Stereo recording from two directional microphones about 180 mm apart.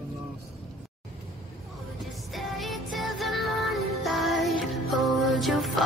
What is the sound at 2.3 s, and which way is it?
Music, centre (ahead or behind).